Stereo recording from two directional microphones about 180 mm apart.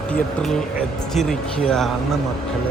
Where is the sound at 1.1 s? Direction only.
Centre (ahead or behind).